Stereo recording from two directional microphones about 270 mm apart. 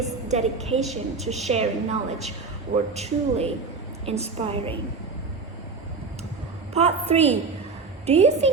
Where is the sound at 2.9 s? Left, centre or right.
Right.